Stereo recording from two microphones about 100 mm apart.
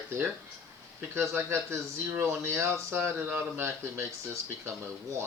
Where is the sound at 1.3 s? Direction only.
25° right (ahead or behind).